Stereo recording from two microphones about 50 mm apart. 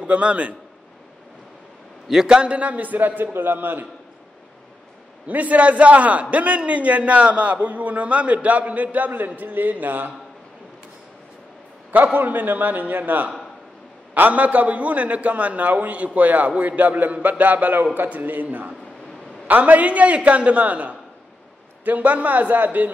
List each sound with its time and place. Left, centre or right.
0.0 s a man's voice: right
2.0 s a man's voice: centre; by 3.8 s right
5.2 s a man's voice: right
11.9 s a man's voice: right